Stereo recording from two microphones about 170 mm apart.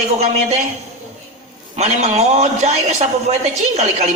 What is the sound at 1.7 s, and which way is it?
A man's voice, 40° right (ahead or behind).